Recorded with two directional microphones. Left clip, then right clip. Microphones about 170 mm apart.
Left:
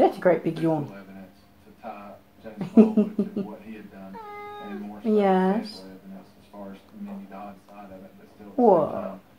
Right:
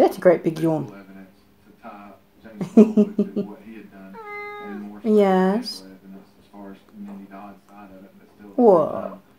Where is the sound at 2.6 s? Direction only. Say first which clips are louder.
Right 4 dB; 60° right (ahead or behind).